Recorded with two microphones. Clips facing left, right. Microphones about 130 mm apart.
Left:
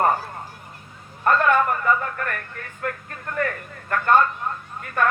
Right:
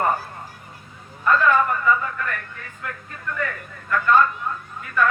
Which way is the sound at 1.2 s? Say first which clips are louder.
Even; 50° left (ahead or behind).